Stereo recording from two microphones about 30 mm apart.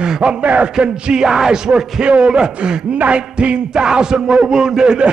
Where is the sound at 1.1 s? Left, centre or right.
Centre.